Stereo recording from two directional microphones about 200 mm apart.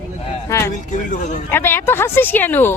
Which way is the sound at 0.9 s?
40° left (ahead or behind).